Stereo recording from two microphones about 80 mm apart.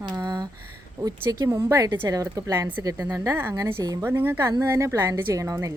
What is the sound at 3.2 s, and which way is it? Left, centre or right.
Speech, right.